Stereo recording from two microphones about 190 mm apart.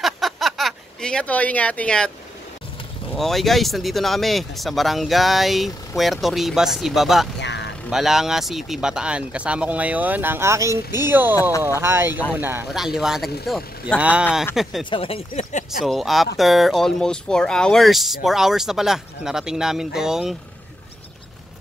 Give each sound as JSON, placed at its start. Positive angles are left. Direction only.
{"t": 0.0, "sound": "a sound", "side_deg": 0}
{"t": 3.2, "sound": "speech", "side_deg": 0}
{"t": 7.3, "sound": "vehicle", "side_deg": 65}
{"t": 7.9, "sound": "speech", "side_deg": 0}
{"t": 14.9, "sound": "speech", "side_deg": 30}
{"t": 15.8, "sound": "speech", "side_deg": 0}